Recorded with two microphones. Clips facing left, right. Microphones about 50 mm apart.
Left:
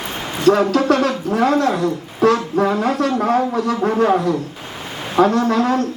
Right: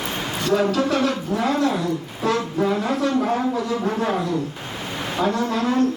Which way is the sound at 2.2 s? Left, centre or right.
Left.